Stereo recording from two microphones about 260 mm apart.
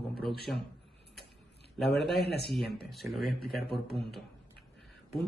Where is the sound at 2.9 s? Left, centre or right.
Centre.